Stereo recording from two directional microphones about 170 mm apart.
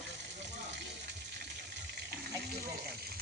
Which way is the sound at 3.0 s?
65° right (ahead or behind).